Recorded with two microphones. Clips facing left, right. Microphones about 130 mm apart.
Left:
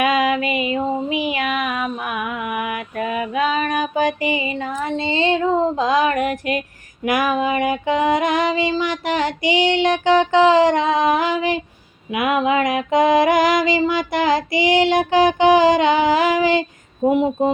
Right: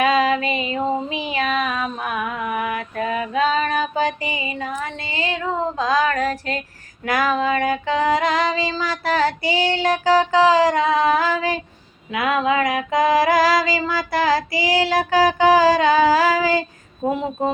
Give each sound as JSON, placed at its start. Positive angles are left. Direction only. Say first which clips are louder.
{"t": 0.0, "sound": "female singing", "louder": "even", "side_deg": -30}
{"t": 1.3, "sound": "child singing", "louder": "even", "side_deg": -30}
{"t": 1.6, "sound": "female singing", "louder": "left 1 dB", "side_deg": 10}
{"t": 2.2, "sound": "music", "louder": "even", "side_deg": -35}
{"t": 2.6, "sound": "mantra", "louder": "even", "side_deg": -35}
{"t": 3.4, "sound": "music", "louder": "right 1 dB", "side_deg": -35}
{"t": 3.7, "sound": "female singing", "louder": "left 2 dB", "side_deg": 15}